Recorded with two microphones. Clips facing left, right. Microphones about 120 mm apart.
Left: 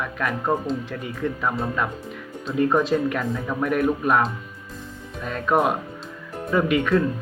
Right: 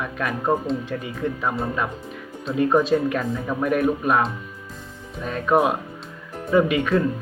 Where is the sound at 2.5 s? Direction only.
15° right (ahead or behind).